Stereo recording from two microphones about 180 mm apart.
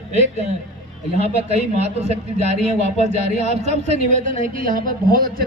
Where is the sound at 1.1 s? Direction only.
35° right (ahead or behind).